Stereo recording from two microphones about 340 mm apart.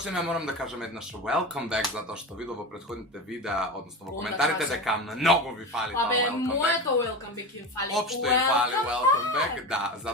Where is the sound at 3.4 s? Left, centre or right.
Centre.